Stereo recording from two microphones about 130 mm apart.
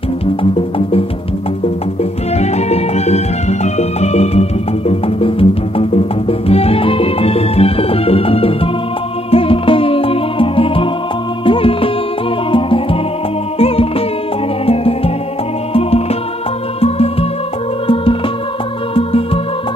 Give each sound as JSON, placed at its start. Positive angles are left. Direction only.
{"t": 0.4, "sound": "music", "side_deg": 45}
{"t": 2.3, "sound": "music", "side_deg": 55}
{"t": 16.8, "sound": "music", "side_deg": 50}
{"t": 18.9, "sound": "music", "side_deg": 45}